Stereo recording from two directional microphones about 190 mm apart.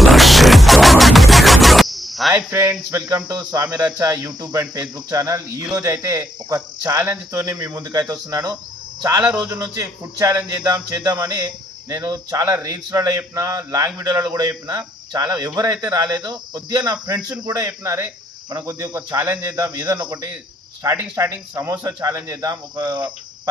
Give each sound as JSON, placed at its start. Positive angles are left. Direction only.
{"t": 0.0, "sound": "music", "side_deg": 0}
{"t": 2.3, "sound": "a man's voice", "side_deg": -15}